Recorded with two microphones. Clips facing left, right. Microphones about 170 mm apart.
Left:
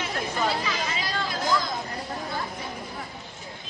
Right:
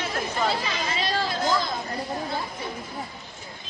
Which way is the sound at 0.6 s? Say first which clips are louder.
Right 1 dB; 30° right (ahead or behind).